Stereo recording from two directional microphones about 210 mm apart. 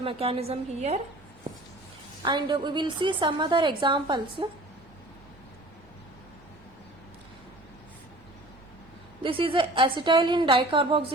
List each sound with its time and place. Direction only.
0.0 s a woman's voice: 25° right (ahead or behind)
2.2 s a woman's voice: 20° right (ahead or behind)
9.2 s a woman's voice: 25° right (ahead or behind)